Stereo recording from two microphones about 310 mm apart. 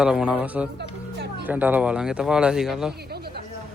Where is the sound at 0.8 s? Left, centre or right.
Right.